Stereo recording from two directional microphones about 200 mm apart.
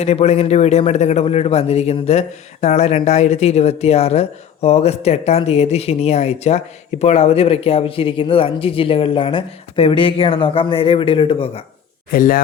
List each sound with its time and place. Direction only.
0.0 s a man's voice: 30° left (ahead or behind)
12.1 s speech: 45° left (ahead or behind)